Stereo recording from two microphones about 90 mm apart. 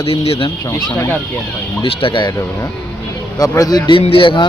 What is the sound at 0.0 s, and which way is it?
Speech, 90° left.